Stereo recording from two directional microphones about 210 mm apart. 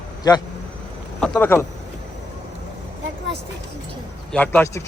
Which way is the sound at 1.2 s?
5° left (ahead or behind).